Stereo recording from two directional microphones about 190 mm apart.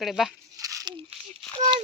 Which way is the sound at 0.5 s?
20° right (ahead or behind).